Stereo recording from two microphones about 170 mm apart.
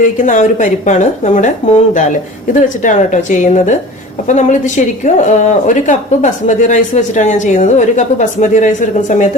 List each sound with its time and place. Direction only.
0.0 s a woman's voice: 50° left (ahead or behind)